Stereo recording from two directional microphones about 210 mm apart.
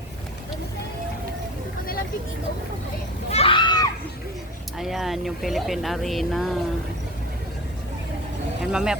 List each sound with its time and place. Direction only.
3.3 s children playing: 25° left (ahead or behind)
4.8 s speech: centre (ahead or behind)
8.6 s speech: 5° right (ahead or behind)